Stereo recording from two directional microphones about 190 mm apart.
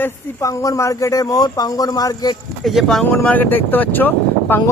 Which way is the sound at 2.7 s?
Centre (ahead or behind).